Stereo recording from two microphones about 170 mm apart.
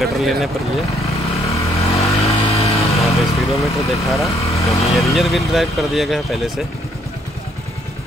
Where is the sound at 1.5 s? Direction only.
40° left (ahead or behind).